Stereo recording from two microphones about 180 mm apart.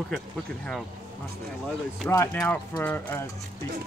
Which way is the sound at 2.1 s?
15° left (ahead or behind).